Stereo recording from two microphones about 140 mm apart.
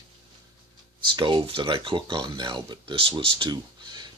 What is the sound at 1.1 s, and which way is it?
Speech, 35° right (ahead or behind).